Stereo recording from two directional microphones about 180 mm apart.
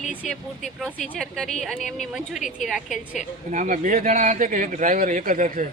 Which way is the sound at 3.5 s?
45° right (ahead or behind).